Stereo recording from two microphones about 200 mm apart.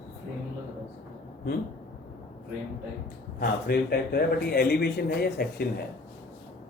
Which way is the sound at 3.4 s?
50° left (ahead or behind).